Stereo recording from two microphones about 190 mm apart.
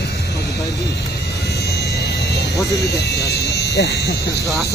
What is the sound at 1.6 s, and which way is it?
Vehicle, 60° left (ahead or behind).